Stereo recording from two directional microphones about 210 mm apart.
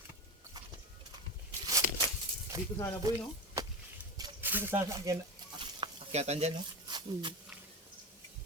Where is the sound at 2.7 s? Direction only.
15° left (ahead or behind).